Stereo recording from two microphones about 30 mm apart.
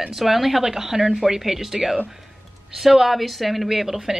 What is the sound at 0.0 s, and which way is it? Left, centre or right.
Speech, centre.